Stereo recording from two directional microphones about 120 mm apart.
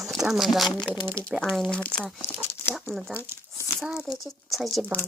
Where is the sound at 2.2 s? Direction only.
20° left (ahead or behind).